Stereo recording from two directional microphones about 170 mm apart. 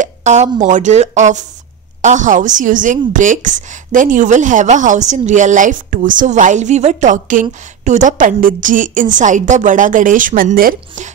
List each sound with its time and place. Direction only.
0.0 s a woman's voice: 45° right (ahead or behind)